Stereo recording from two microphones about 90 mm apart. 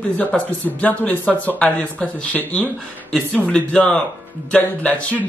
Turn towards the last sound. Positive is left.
turn(degrees=15)  # may be behind; listen again after turning